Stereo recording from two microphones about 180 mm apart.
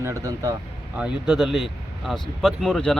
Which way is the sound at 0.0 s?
20° right (ahead or behind).